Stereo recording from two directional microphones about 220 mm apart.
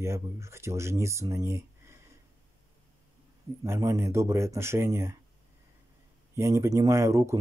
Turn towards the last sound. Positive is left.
turn(degrees=-15)  # may be behind; listen again after turning